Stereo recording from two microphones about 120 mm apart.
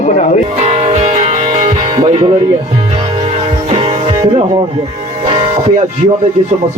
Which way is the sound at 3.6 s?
50° right (ahead or behind).